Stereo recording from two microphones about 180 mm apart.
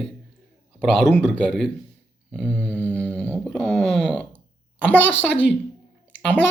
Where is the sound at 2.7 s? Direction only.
10° left (ahead or behind).